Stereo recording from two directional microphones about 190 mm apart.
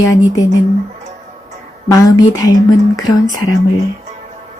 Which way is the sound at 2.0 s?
15° left (ahead or behind).